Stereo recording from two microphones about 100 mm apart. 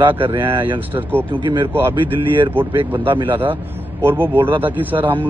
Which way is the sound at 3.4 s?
20° right (ahead or behind).